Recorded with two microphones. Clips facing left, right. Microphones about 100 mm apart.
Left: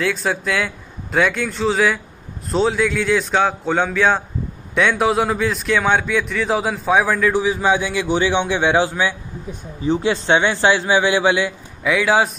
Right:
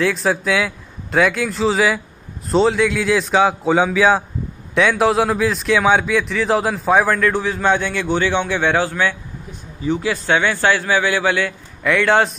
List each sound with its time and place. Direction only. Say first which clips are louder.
0.0 s a man's voice: right 3 dB; centre (ahead or behind); by 9.1 s 15° left (ahead or behind)
9.8 s a man's voice: left 2 dB; 30° left (ahead or behind); by 12.3 s 5° left (ahead or behind)